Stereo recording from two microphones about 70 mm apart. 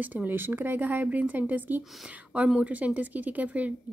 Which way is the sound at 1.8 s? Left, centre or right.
Centre.